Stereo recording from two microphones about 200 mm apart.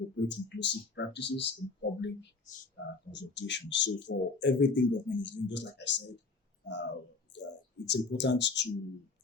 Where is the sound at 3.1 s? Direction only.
60° left (ahead or behind).